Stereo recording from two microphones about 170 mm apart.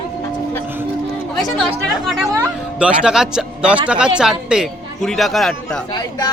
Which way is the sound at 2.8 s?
5° right (ahead or behind).